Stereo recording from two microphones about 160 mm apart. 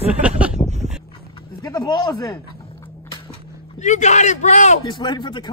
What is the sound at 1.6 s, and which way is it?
Speech, 25° left (ahead or behind).